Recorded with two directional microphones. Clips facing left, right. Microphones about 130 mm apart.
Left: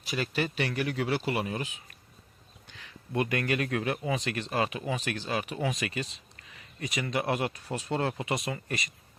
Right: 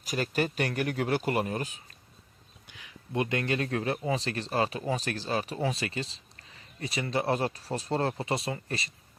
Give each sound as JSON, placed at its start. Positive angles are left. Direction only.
{"t": 0.0, "sound": "speech", "side_deg": -45}
{"t": 2.6, "sound": "speech", "side_deg": -15}